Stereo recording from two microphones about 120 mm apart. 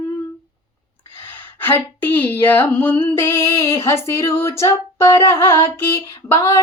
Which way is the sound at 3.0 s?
20° left (ahead or behind).